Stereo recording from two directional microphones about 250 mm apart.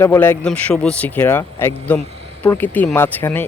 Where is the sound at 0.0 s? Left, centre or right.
Centre.